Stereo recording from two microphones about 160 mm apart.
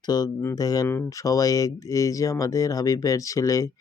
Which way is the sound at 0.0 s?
25° left (ahead or behind).